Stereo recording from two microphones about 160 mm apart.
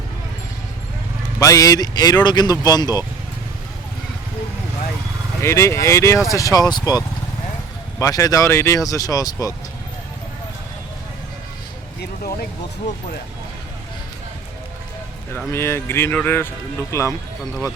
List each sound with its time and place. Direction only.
1.4 s speech: 20° left (ahead or behind)
5.4 s speech: 15° left (ahead or behind)
11.9 s speech: 70° left (ahead or behind)
15.5 s speech: 15° left (ahead or behind)